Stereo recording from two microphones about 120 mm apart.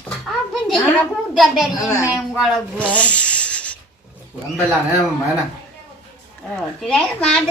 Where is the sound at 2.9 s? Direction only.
10° left (ahead or behind).